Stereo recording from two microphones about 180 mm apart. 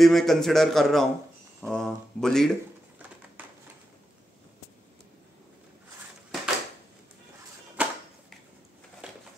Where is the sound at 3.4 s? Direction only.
10° right (ahead or behind).